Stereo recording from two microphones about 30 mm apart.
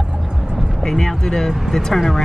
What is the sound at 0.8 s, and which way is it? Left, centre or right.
Speech, centre.